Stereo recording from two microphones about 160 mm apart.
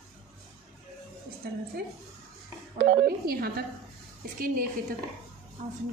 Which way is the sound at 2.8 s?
75° right (ahead or behind).